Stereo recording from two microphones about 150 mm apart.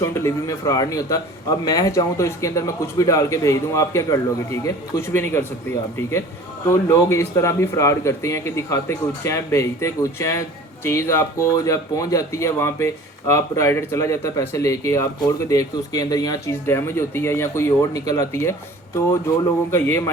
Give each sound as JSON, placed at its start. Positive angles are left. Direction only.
{"t": 0.0, "sound": "speech", "side_deg": 20}